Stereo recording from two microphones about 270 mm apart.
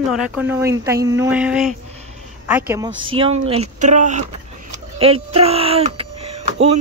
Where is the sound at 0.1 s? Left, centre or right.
Centre.